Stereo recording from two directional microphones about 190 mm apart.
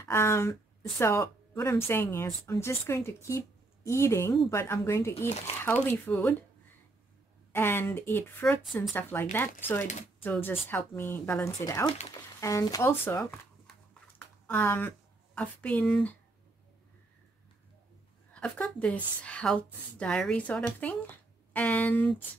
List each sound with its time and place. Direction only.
0.0 s a woman's voice: 15° left (ahead or behind)
7.5 s a woman's voice: 10° left (ahead or behind)
18.3 s a woman's voice: 5° left (ahead or behind)